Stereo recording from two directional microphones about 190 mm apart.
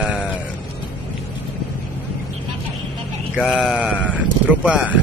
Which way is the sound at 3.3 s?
Centre (ahead or behind).